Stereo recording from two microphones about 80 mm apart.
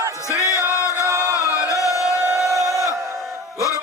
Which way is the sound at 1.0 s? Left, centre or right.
Right.